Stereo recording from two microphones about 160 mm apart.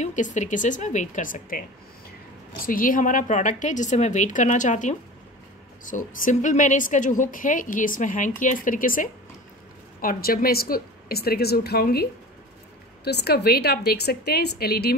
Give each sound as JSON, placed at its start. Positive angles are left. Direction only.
{"t": 0.0, "sound": "a woman's voice", "side_deg": 50}
{"t": 13.0, "sound": "a woman's voice", "side_deg": 90}